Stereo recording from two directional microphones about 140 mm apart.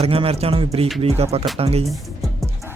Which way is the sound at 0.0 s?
45° right (ahead or behind).